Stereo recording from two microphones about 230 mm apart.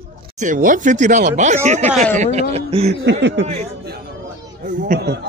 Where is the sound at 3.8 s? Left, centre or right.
Right.